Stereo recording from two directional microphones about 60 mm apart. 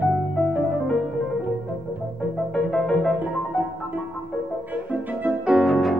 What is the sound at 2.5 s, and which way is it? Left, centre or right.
Music, centre.